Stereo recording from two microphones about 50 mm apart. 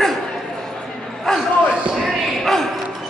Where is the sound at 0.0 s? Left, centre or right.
Centre.